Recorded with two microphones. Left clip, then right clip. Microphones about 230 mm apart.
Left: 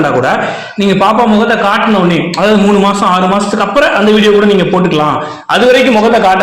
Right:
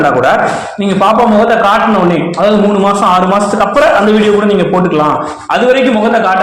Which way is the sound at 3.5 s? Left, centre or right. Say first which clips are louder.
Right 1 dB; left.